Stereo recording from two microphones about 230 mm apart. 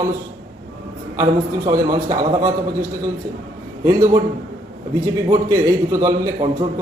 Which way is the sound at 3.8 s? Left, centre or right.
Centre.